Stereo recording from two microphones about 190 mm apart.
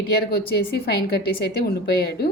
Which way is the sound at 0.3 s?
55° left (ahead or behind).